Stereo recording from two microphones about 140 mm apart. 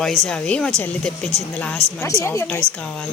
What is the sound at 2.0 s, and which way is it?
Speech, 20° left (ahead or behind).